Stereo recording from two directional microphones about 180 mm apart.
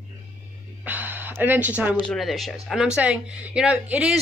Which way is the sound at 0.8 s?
10° right (ahead or behind).